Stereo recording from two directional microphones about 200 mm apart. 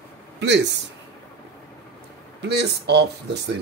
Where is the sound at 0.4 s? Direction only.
60° right (ahead or behind).